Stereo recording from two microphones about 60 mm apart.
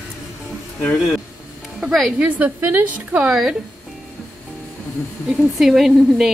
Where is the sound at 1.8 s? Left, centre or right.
Centre.